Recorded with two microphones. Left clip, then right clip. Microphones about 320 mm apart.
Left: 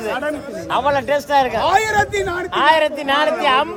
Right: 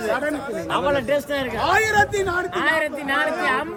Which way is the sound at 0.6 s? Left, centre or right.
Left.